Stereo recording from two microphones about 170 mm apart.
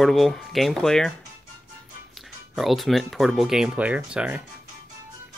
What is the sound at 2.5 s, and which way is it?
Speech, centre (ahead or behind).